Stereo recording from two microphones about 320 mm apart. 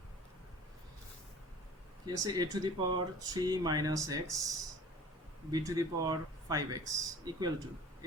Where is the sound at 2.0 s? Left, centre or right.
Centre.